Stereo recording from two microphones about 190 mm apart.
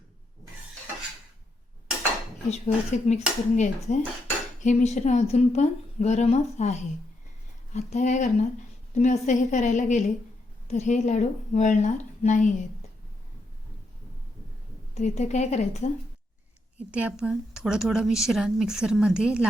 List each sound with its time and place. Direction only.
2.5 s a woman's voice: 35° left (ahead or behind)
14.9 s a woman's voice: 35° left (ahead or behind)
16.7 s a woman's voice: 5° right (ahead or behind)